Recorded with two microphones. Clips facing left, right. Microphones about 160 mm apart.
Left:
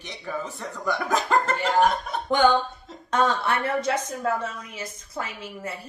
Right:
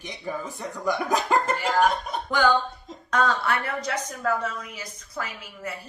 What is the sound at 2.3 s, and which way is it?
A woman's voice, 25° left (ahead or behind).